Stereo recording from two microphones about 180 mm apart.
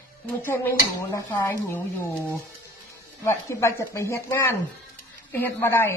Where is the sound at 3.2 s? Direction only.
15° left (ahead or behind).